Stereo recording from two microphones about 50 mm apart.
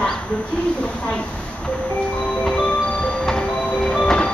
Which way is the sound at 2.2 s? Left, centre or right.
Left.